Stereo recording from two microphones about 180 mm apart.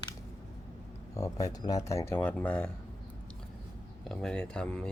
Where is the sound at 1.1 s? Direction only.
20° left (ahead or behind).